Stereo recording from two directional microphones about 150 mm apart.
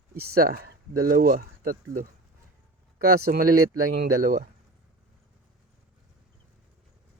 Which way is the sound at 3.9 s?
85° right.